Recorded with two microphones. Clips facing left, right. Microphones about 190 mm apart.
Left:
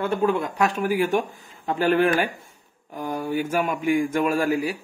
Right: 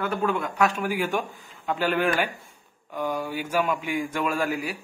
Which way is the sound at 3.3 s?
50° left (ahead or behind).